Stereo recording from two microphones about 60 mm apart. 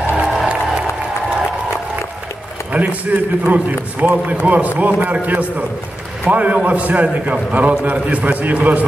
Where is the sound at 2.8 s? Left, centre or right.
Right.